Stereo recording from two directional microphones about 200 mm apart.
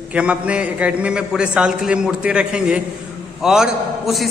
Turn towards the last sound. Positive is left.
turn(degrees=0)  # may be behind; listen again after turning